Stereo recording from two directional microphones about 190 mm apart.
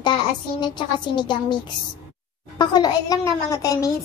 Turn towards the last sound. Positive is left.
turn(degrees=20)  # may be behind; listen again after turning